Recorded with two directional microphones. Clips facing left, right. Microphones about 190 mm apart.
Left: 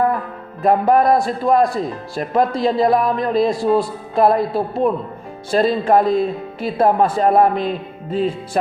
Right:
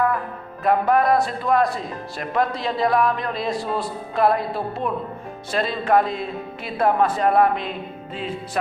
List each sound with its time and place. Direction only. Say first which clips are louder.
0.6 s speech: left 4 dB; 35° left (ahead or behind)